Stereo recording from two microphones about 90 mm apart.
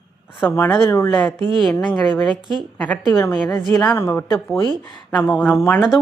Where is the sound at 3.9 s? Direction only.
30° left (ahead or behind).